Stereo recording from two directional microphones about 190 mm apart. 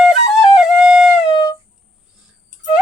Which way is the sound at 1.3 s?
20° left (ahead or behind).